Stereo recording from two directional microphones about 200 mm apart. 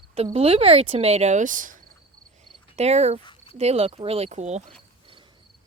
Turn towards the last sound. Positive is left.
turn(degrees=-35)  # may be behind; listen again after turning